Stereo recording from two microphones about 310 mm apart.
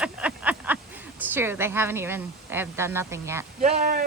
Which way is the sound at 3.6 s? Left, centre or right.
Right.